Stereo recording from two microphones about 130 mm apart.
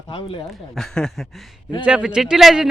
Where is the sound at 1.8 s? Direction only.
10° right (ahead or behind).